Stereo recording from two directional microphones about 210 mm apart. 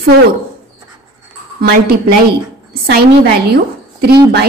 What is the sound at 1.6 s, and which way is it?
Speech, 50° right (ahead or behind).